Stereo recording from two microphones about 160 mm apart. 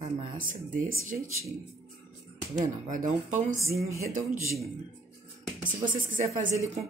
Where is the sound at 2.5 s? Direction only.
55° right (ahead or behind).